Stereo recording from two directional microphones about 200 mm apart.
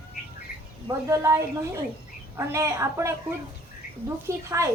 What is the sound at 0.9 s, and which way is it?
A woman's voice, 15° right (ahead or behind).